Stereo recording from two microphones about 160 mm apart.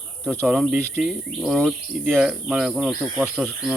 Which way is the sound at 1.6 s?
5° right (ahead or behind).